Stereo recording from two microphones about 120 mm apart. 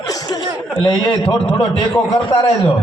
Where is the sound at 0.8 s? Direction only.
40° left (ahead or behind).